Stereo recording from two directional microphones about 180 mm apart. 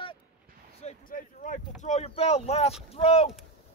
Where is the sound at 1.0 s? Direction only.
50° left (ahead or behind).